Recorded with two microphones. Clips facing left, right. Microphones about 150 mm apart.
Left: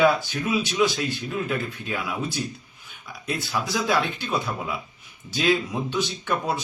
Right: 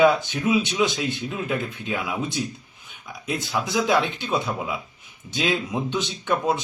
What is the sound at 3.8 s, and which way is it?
Speech, centre (ahead or behind).